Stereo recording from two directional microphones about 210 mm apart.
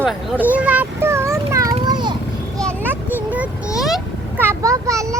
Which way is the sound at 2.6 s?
10° right (ahead or behind).